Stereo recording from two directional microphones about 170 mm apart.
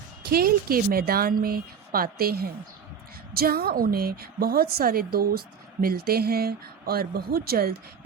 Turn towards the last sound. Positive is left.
turn(degrees=-65)  # may be behind; listen again after turning